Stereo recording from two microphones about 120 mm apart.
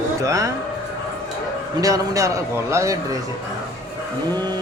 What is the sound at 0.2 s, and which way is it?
Speech, 25° right (ahead or behind).